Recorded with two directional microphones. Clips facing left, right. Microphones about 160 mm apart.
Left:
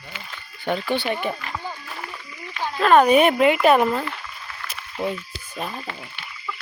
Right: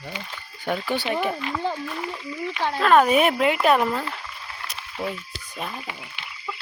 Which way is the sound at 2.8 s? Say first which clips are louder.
Left 3 dB; centre (ahead or behind).